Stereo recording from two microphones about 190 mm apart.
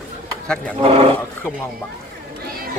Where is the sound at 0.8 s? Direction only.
30° right (ahead or behind).